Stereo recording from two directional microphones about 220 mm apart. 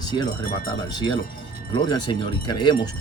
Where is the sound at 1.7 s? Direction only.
20° left (ahead or behind).